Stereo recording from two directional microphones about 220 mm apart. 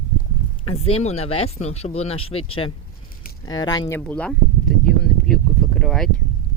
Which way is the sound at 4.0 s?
5° left (ahead or behind).